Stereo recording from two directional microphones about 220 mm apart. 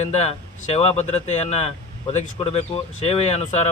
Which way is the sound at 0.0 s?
30° left (ahead or behind).